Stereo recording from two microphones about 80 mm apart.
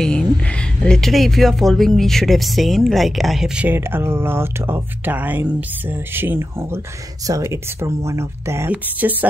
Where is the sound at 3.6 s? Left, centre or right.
Right.